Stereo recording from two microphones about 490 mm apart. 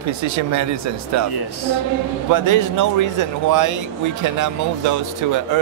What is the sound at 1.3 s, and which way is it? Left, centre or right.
Speech, left.